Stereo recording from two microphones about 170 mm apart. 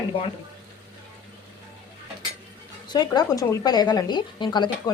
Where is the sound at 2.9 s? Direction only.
25° left (ahead or behind).